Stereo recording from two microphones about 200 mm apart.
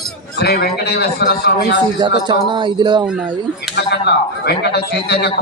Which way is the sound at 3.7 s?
55° left (ahead or behind).